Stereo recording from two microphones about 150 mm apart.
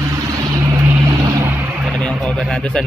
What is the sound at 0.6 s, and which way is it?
Vehicle, 20° right (ahead or behind).